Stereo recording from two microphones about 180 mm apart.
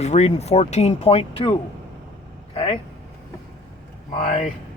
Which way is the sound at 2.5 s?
35° left (ahead or behind).